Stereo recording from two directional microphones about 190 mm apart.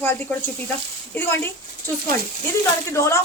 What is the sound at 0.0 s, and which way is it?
A woman's voice, 10° left (ahead or behind).